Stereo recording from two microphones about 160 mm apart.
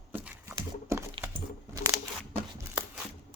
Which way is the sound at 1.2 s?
15° right (ahead or behind).